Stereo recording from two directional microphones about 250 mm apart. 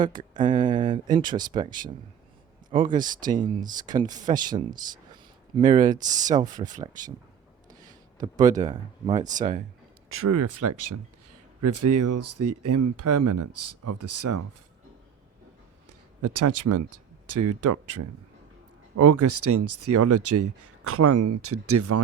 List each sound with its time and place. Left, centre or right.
0.0 s speech: centre
5.9 s speech: centre
8.2 s speech: centre
9.4 s speech: right
10.2 s speech: right
15.9 s a sound: right
17.2 s speech: right